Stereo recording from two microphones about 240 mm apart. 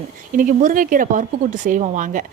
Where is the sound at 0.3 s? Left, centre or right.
Right.